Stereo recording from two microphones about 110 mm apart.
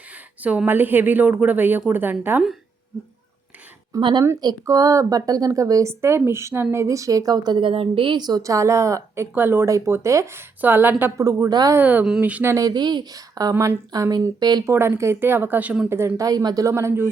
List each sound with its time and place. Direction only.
0.4 s a woman's voice: 15° right (ahead or behind)
4.2 s a woman's voice: 35° right (ahead or behind)
10.6 s a woman's voice: 15° right (ahead or behind)
11.2 s a woman's voice: 30° right (ahead or behind)
11.8 s a woman's voice: 15° right (ahead or behind)
12.5 s speech: 40° right (ahead or behind)
14.7 s a woman's voice: 25° right (ahead or behind)
15.9 s a woman's voice: 25° right (ahead or behind)